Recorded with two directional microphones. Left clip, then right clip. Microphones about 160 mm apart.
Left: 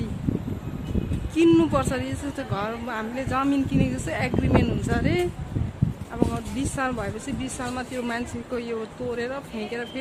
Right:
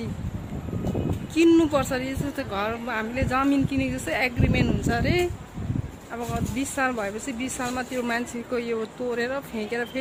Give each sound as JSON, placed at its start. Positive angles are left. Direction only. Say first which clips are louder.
{"t": 1.4, "sound": "speech", "louder": "even", "side_deg": 0}
{"t": 6.3, "sound": "speech", "louder": "right 1 dB", "side_deg": -10}